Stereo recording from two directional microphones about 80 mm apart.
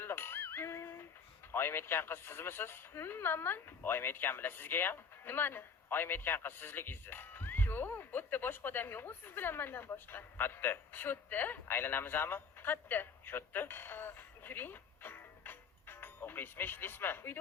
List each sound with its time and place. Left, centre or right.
0.0 s music: left
1.5 s speech: left